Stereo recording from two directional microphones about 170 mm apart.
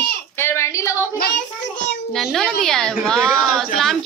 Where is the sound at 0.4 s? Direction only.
15° left (ahead or behind).